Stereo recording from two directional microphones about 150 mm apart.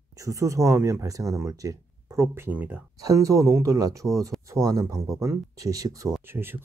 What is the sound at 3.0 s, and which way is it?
Speech, 20° right (ahead or behind).